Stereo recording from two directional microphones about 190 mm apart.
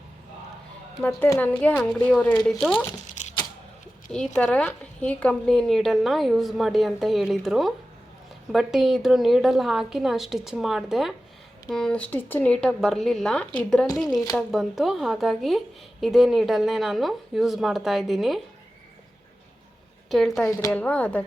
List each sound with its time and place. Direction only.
1.0 s a woman's voice: 10° left (ahead or behind)
4.4 s speech: 5° left (ahead or behind)
20.1 s a woman's voice: centre (ahead or behind)
20.5 s a woman's voice: 15° left (ahead or behind)
20.8 s a woman's voice: 5° left (ahead or behind)